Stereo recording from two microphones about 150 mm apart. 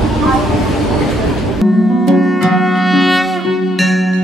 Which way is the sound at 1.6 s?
Centre (ahead or behind).